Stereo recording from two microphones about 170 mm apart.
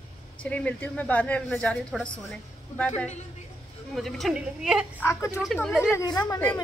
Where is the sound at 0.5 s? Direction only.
10° left (ahead or behind).